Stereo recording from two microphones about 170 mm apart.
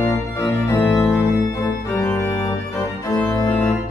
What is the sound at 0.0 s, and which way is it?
Organ, 15° left (ahead or behind).